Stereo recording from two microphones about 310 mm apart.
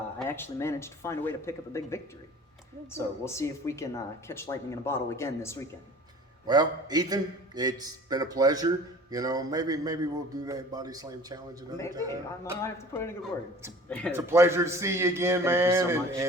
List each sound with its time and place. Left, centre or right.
0.2 s speech: centre
3.2 s speech: centre
6.5 s a man's voice: centre
12.6 s speech: centre
14.1 s a man's voice: centre